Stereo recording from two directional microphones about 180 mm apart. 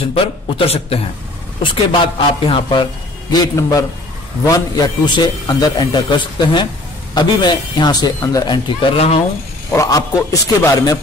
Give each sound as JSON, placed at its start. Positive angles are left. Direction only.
{"t": 0.1, "sound": "a man's voice", "side_deg": 30}
{"t": 9.7, "sound": "a man's voice", "side_deg": 20}